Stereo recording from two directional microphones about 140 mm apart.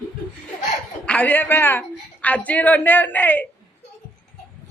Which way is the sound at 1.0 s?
10° left (ahead or behind).